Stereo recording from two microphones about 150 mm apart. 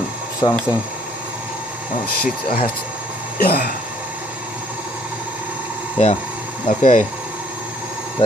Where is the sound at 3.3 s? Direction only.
90° left.